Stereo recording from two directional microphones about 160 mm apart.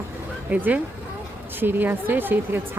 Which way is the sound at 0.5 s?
10° right (ahead or behind).